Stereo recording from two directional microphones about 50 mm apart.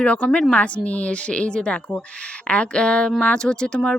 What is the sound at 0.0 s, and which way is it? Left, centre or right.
Speech, left.